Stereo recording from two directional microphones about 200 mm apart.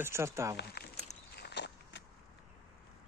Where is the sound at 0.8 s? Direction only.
50° left (ahead or behind).